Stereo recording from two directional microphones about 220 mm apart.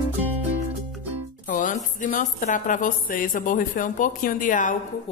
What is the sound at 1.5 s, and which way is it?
Music, 35° left (ahead or behind).